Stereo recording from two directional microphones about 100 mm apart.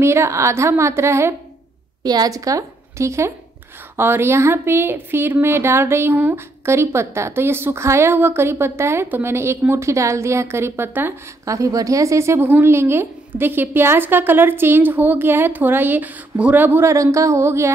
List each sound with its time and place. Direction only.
0.0 s speech: 25° right (ahead or behind)
2.0 s a woman's voice: 40° right (ahead or behind)